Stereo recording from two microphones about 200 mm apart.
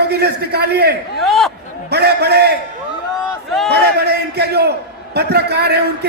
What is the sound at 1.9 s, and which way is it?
Speech, 55° right (ahead or behind).